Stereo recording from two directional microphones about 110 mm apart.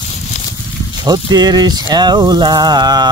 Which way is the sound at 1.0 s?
40° right (ahead or behind).